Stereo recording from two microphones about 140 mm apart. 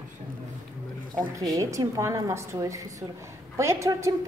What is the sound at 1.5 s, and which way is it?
A woman's voice, 20° right (ahead or behind).